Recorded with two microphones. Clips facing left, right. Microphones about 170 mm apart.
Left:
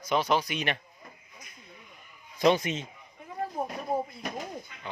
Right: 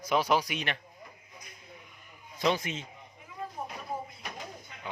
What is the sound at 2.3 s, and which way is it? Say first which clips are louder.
Speech: left 5 dB; 20° left (ahead or behind).